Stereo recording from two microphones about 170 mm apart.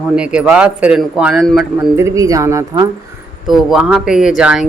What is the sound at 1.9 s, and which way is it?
Speech, 20° right (ahead or behind).